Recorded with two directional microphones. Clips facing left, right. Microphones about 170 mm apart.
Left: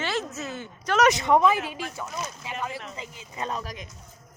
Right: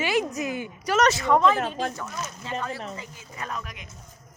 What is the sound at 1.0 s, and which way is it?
Speech, 15° left (ahead or behind).